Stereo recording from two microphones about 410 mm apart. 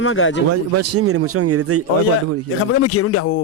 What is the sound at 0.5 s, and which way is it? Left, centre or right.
A man's voice, right.